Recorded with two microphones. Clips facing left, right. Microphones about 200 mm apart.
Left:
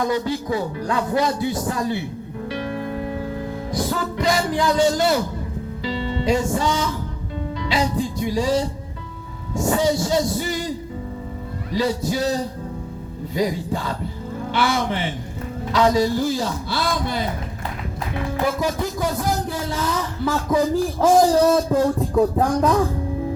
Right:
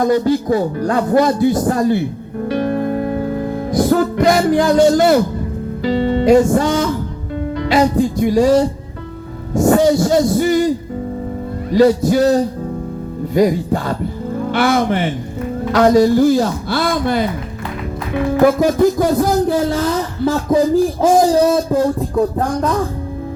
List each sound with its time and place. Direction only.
0.0 s a man's voice: 45° right (ahead or behind)
2.5 s music: 50° right (ahead or behind)
5.8 s a man's voice: 50° right (ahead or behind)
11.7 s a man's voice: 50° right (ahead or behind)
18.3 s a man's voice: 50° right (ahead or behind); by 20.8 s 25° right (ahead or behind)
21.0 s speech: 10° right (ahead or behind)